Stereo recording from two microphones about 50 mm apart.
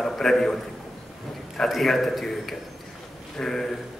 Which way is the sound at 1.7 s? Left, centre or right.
Centre.